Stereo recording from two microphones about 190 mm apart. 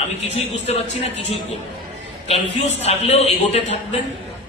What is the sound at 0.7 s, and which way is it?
A man's voice, 35° left (ahead or behind).